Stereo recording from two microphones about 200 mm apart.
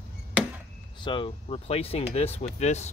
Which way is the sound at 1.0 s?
25° left (ahead or behind).